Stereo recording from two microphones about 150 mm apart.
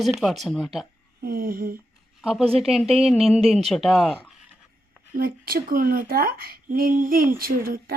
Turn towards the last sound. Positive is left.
turn(degrees=-80)